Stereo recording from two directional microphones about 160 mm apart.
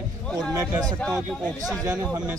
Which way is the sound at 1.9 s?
10° right (ahead or behind).